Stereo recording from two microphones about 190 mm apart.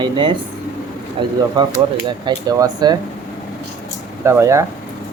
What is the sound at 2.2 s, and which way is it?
Speech, 20° right (ahead or behind).